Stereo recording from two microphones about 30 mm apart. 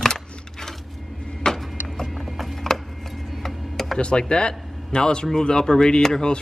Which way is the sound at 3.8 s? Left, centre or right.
Centre.